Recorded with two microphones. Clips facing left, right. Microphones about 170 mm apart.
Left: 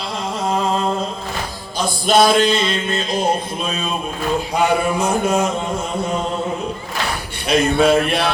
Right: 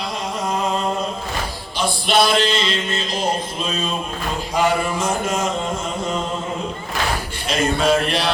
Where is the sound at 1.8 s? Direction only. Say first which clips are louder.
Left 3 dB; 40° left (ahead or behind).